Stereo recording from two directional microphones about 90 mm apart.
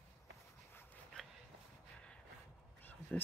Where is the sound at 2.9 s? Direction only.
20° left (ahead or behind).